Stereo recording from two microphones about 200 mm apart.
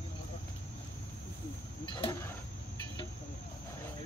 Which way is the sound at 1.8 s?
25° left (ahead or behind).